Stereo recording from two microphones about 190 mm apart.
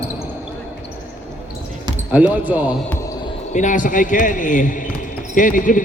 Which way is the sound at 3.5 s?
40° left (ahead or behind).